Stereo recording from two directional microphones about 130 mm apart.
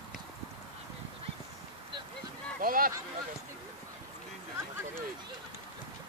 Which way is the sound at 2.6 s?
90° right.